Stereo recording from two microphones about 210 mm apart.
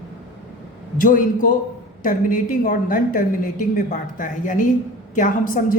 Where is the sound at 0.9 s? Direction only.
40° left (ahead or behind).